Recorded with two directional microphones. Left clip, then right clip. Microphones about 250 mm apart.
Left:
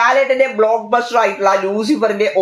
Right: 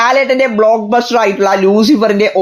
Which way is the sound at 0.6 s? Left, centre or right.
Right.